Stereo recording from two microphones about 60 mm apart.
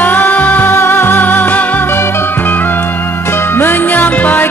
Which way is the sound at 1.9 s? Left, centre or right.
Left.